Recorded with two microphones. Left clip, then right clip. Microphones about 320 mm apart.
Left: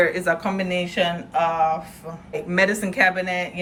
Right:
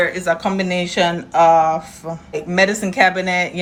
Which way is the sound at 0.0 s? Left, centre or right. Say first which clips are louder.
Right 2 dB; centre.